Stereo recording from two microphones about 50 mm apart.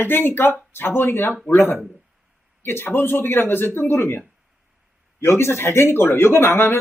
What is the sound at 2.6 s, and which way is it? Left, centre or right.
Speech, left.